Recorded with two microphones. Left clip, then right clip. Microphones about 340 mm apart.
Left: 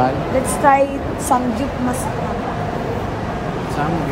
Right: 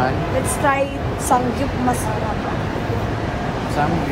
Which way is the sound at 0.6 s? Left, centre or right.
Left.